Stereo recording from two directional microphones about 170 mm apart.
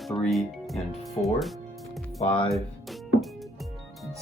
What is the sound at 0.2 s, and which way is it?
Speech, centre (ahead or behind).